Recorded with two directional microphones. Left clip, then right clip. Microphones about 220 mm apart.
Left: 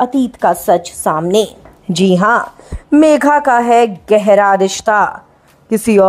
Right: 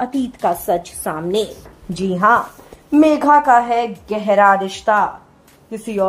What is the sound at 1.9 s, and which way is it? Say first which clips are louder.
Speech: left 3 dB; 45° left (ahead or behind).